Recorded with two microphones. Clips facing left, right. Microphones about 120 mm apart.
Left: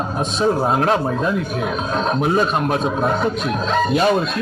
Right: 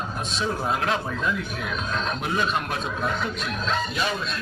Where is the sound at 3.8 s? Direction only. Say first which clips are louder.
Left 11 dB; 50° left (ahead or behind).